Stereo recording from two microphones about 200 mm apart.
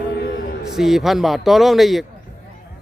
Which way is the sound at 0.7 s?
Centre (ahead or behind).